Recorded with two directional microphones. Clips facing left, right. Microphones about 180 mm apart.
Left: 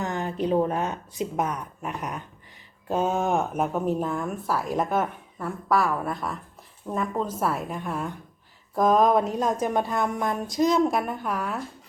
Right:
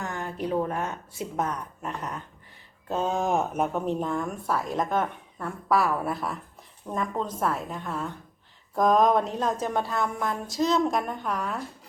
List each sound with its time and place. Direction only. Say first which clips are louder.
0.0 s a woman's voice: left 4 dB; 20° left (ahead or behind)
8.7 s a woman's voice: left 1 dB; centre (ahead or behind)